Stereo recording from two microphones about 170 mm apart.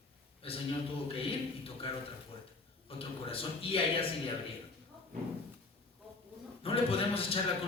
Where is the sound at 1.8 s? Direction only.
35° left (ahead or behind).